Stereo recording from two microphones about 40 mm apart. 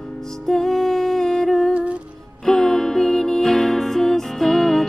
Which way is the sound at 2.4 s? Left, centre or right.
Centre.